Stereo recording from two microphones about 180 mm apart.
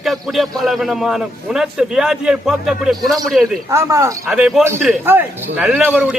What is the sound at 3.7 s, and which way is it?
Speech, 15° right (ahead or behind).